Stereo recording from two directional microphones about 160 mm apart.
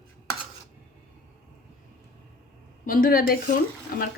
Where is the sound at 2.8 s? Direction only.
65° left (ahead or behind).